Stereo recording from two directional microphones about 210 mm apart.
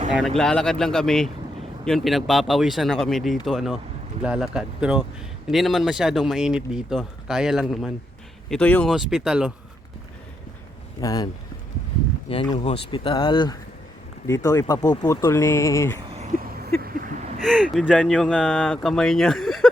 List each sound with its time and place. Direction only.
0.3 s speech: centre (ahead or behind)
11.0 s speech: 20° left (ahead or behind)
12.3 s speech: 25° left (ahead or behind)
16.8 s a sound: 45° right (ahead or behind)
17.4 s speech: centre (ahead or behind)